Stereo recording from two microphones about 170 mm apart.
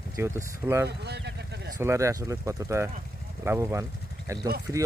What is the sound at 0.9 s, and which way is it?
Speech, 75° right (ahead or behind).